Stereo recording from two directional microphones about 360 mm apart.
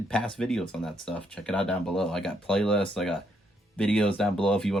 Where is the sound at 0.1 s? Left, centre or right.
Centre.